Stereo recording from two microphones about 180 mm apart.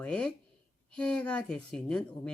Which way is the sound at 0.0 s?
5° left (ahead or behind).